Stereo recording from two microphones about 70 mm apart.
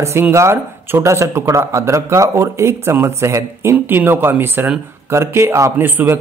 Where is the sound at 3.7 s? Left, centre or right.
Right.